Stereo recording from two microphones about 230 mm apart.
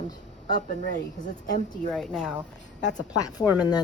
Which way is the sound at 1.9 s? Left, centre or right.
Centre.